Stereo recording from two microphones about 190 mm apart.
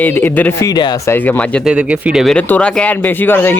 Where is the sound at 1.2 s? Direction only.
10° left (ahead or behind).